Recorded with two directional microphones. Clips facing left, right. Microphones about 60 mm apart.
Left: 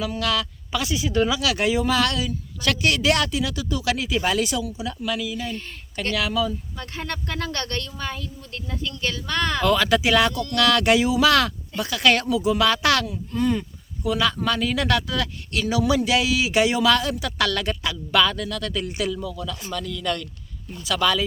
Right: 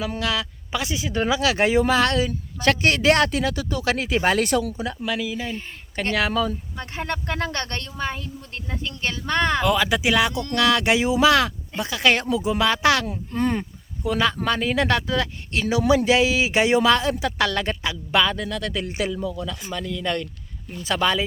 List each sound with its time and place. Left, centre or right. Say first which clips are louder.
0.0 s speech: left 1 dB; right
4.9 s speech: right 1 dB; right
6.9 s speech: right 3 dB; right
9.6 s speech: left 1 dB; centre
13.1 s speech: even; right